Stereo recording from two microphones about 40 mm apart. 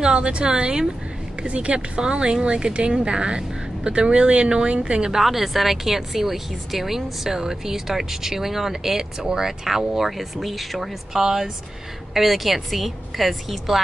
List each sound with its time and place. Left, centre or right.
0.0 s speech: right
5.1 s a woman's voice: centre